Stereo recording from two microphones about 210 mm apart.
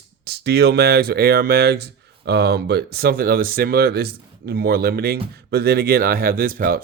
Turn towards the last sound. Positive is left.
turn(degrees=-45)  # may be behind; listen again after turning